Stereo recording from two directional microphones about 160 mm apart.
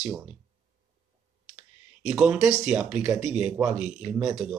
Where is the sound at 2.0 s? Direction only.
5° right (ahead or behind).